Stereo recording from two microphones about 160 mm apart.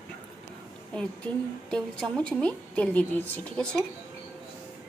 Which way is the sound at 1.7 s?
5° left (ahead or behind).